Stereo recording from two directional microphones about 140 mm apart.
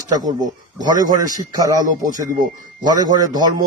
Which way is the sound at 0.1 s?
30° right (ahead or behind).